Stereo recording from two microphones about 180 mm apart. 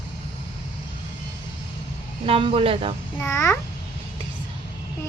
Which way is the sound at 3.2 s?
15° left (ahead or behind).